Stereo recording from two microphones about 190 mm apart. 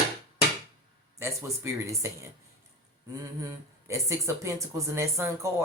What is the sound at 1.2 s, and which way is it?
Speech, 15° right (ahead or behind).